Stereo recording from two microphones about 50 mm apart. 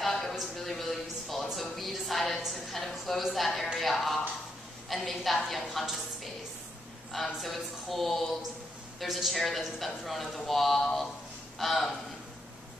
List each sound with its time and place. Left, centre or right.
0.0 s a sound: centre
2.4 s a man's voice: centre
7.3 s a man's voice: centre